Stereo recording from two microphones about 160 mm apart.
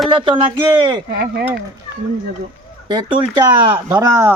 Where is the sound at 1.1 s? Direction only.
80° right.